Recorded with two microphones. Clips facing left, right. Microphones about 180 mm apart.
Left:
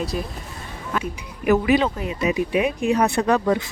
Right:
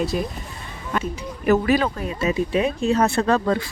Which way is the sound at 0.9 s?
5° left (ahead or behind).